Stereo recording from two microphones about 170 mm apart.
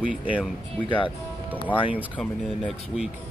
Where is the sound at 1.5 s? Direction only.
10° left (ahead or behind).